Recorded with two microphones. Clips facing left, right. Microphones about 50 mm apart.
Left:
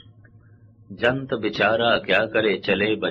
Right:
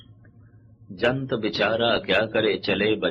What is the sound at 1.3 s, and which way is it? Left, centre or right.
Speech, centre.